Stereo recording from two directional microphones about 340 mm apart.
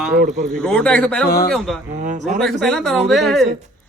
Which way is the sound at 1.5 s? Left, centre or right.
Centre.